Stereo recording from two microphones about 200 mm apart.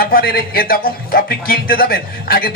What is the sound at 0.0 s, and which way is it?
A man's voice, 50° left (ahead or behind).